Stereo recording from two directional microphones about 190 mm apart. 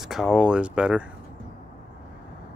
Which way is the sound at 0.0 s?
Centre (ahead or behind).